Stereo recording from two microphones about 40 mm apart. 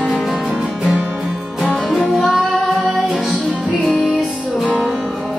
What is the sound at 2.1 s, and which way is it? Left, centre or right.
Music, centre.